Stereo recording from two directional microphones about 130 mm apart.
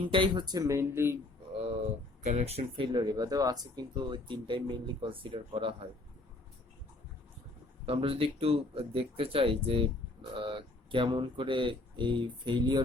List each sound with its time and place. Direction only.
0.1 s speech: 35° right (ahead or behind); by 1.2 s 20° right (ahead or behind)
2.2 s speech: 60° right (ahead or behind)
2.9 s speech: 30° right (ahead or behind)
7.9 s speech: 45° right (ahead or behind)